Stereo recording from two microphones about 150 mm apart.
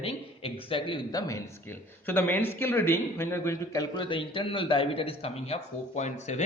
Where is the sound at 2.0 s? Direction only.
15° left (ahead or behind).